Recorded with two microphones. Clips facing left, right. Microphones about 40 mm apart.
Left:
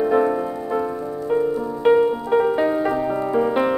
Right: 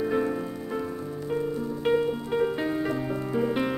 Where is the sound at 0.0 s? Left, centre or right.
Centre.